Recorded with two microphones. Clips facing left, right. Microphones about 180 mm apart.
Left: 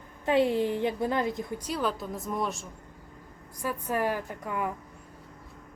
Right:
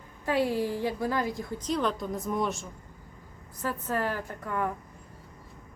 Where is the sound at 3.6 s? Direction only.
15° left (ahead or behind).